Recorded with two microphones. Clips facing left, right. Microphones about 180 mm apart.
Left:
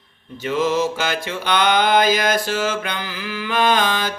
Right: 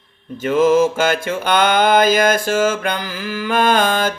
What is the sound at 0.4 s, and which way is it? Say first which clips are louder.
Mantra: right 6 dB; 50° right (ahead or behind).